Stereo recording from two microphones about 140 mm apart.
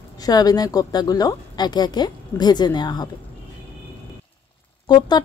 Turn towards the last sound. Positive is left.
turn(degrees=30)  # may be behind; listen again after turning